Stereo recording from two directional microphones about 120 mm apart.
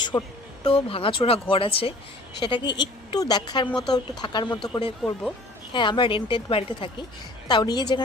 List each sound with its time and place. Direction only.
0.0 s a sound: 35° left (ahead or behind)
0.6 s speech: 50° left (ahead or behind)
3.7 s speech: 5° left (ahead or behind)
4.2 s speech: 40° left (ahead or behind)
5.0 s speech: 5° right (ahead or behind)
5.7 s speech: 40° left (ahead or behind)
7.4 s speech: 35° left (ahead or behind)